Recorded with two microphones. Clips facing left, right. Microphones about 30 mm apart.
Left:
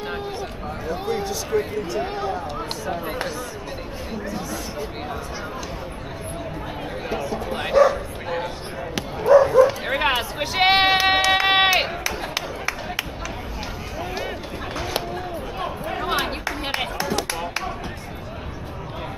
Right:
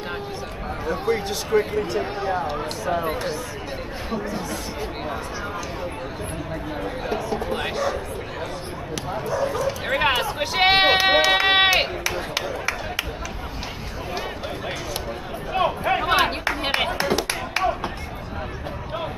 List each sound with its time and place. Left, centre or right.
1.5 s speech: right
2.9 s speech: centre
7.1 s music: centre
7.4 s bow-wow: centre
7.7 s bow-wow: centre
8.9 s bow-wow: left
9.8 s run: centre
12.4 s a sound: centre
15.5 s a sound: right
16.0 s clapping: centre